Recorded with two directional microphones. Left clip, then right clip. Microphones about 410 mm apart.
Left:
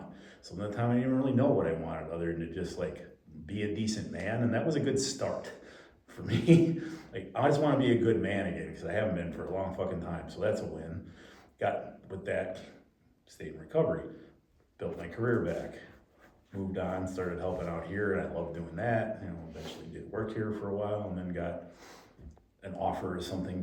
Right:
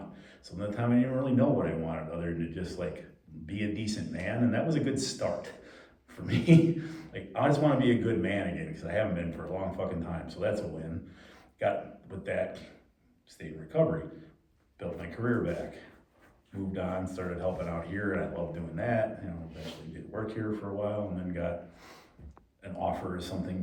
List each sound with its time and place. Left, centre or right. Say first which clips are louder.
0.1 s speech: left 1 dB; centre
16.7 s speech: even; centre
20.2 s speech: right 1 dB; centre